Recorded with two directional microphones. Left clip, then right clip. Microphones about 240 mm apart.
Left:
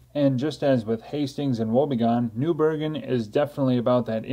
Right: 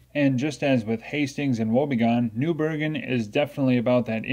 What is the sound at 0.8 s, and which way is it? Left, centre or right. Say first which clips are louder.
Speech: even; right.